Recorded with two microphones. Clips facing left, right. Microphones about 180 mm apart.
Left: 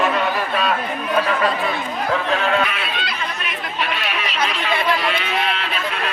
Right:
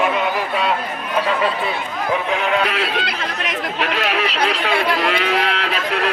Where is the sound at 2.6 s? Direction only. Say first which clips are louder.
Right 4 dB; 75° right (ahead or behind).